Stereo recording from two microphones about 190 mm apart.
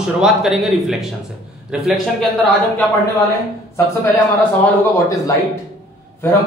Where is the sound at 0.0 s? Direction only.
Centre (ahead or behind).